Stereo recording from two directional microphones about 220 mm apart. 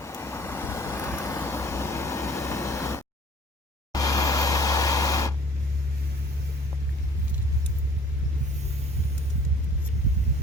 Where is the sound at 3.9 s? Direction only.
15° left (ahead or behind).